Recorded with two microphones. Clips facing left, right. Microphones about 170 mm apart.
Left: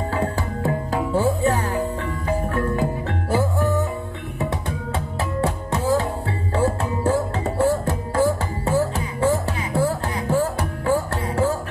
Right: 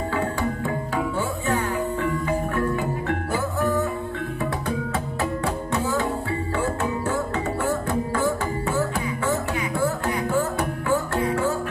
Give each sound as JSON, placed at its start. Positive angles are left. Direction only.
{"t": 0.1, "sound": "music", "side_deg": 35}
{"t": 5.4, "sound": "music", "side_deg": 35}